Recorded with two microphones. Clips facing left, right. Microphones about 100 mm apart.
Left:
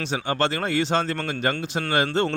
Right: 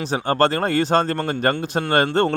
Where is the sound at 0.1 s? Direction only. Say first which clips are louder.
Right 6 dB; 45° right (ahead or behind).